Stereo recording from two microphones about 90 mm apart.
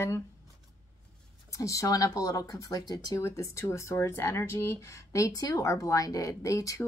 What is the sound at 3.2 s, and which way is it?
Speech, 35° left (ahead or behind).